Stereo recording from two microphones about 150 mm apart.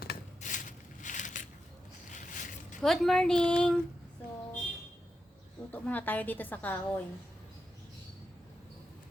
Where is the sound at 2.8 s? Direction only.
Centre (ahead or behind).